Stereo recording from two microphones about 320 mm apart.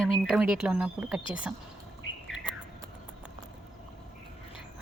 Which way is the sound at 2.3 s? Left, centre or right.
Centre.